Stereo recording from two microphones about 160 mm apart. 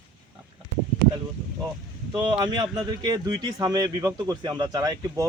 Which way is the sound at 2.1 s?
30° right (ahead or behind).